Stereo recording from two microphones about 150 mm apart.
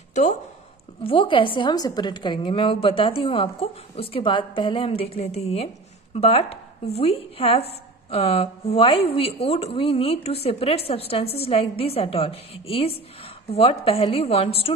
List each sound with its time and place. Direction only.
0.1 s speech: 50° left (ahead or behind)
1.0 s a woman's voice: 35° left (ahead or behind)